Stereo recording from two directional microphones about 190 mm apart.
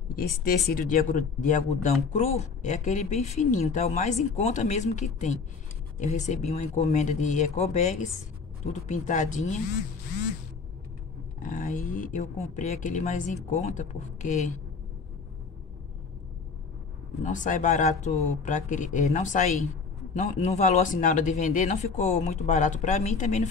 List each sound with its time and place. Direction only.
0.1 s speech: 50° left (ahead or behind)
11.4 s speech: 45° left (ahead or behind)
17.2 s speech: 40° left (ahead or behind)